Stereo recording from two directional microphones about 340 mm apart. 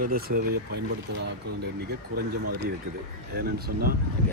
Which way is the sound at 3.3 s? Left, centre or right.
Right.